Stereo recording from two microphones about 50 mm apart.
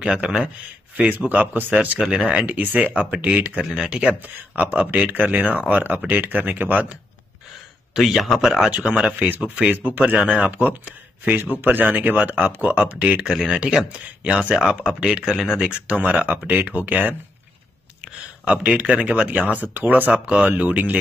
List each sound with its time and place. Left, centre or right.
0.0 s a man's voice: centre
1.2 s speech: right
2.0 s speech: centre
2.4 s speech: right
3.8 s a man's voice: centre
4.1 s speech: right
7.9 s speech: centre
8.6 s speech: centre
10.1 s speech: right
13.7 s a man's voice: centre
16.0 s speech: right
18.4 s speech: right